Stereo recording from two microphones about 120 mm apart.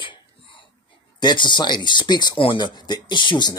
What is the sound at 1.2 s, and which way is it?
Speech, 40° left (ahead or behind).